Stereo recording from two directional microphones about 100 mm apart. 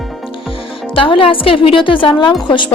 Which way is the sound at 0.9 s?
60° left (ahead or behind).